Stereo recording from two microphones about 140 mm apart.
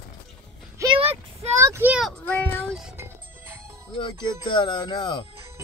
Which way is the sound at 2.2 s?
15° left (ahead or behind).